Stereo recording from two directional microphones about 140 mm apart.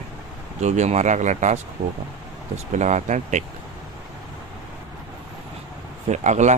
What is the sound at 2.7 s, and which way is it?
Speech, 55° right (ahead or behind).